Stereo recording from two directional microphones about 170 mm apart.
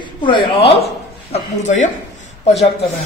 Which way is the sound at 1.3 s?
45° left (ahead or behind).